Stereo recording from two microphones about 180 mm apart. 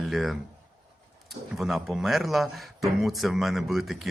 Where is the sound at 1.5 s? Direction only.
Centre (ahead or behind).